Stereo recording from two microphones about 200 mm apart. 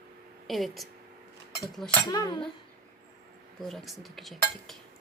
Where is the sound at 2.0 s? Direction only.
20° left (ahead or behind).